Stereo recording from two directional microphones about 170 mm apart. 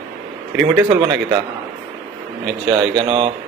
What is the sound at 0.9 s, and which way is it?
Speech, 30° right (ahead or behind).